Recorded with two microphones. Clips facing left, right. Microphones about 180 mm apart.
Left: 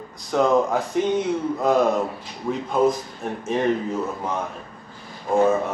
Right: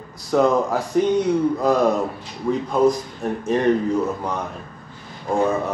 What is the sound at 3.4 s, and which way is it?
Speech, centre (ahead or behind).